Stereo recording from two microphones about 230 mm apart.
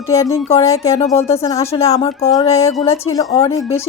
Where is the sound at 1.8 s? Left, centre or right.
Left.